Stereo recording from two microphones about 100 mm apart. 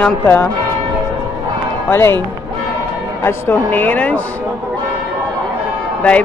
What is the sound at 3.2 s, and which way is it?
A man's voice, 20° left (ahead or behind).